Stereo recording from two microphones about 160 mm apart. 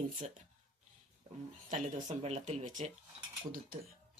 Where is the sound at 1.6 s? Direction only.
50° right (ahead or behind).